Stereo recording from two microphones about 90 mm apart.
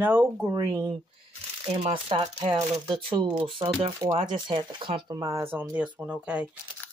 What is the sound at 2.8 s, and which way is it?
Speech, 65° right (ahead or behind).